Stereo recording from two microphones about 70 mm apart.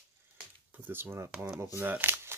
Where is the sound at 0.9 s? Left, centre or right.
Right.